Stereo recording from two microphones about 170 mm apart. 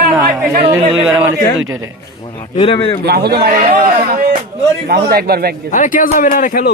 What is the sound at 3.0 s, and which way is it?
Speech, 70° right (ahead or behind).